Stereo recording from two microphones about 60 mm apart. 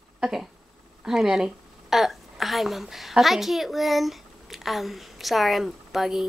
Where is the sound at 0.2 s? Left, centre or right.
Centre.